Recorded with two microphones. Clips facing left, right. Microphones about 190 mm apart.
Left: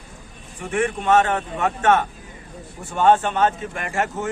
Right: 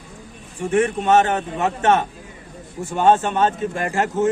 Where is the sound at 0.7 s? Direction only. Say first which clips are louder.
Right 2 dB; 30° right (ahead or behind).